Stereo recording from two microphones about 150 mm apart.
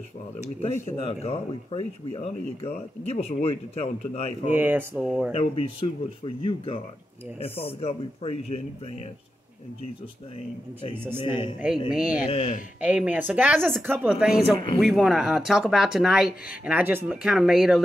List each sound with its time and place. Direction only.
1.0 s speech: 40° left (ahead or behind)
4.5 s speech: 15° right (ahead or behind)
5.3 s speech: 40° left (ahead or behind)
11.0 s speech: 15° right (ahead or behind)
12.3 s speech: 40° left (ahead or behind)
12.8 s speech: 10° right (ahead or behind)